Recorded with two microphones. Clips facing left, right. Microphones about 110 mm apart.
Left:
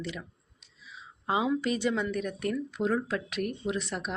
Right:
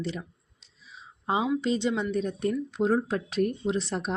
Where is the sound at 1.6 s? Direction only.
25° right (ahead or behind).